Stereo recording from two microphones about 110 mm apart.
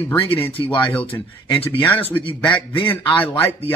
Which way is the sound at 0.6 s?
45° left (ahead or behind).